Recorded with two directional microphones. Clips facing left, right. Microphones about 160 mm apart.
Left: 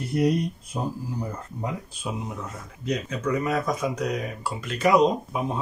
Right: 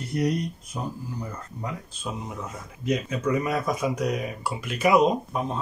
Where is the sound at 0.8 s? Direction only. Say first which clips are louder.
Left 3 dB; 25° left (ahead or behind).